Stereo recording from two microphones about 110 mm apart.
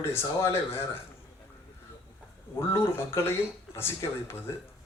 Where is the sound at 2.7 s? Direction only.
25° left (ahead or behind).